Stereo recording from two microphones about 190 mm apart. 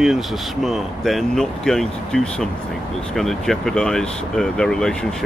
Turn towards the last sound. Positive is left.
turn(degrees=5)  # may be behind; listen again after turning